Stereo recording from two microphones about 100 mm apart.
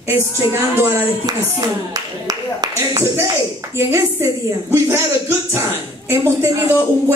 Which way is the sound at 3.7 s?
30° right (ahead or behind).